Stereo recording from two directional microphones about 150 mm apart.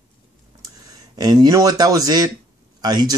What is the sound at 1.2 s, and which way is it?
Speech, 25° right (ahead or behind).